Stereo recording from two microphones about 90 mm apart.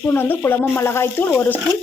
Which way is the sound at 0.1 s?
25° left (ahead or behind).